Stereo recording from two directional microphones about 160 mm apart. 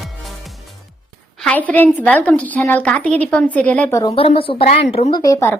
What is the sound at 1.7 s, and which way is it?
A woman's voice, 10° left (ahead or behind).